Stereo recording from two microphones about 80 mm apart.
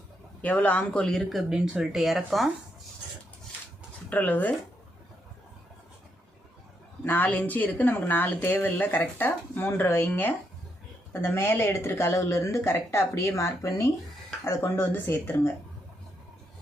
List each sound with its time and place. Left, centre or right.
0.4 s speech: centre
4.1 s speech: left
7.0 s speech: left